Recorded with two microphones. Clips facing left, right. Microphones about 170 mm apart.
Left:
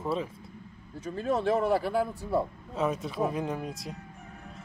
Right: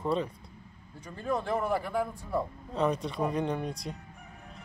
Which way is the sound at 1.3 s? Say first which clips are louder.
Left 4 dB; 30° left (ahead or behind).